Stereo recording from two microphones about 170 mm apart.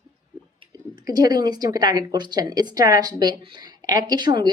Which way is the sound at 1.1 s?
25° right (ahead or behind).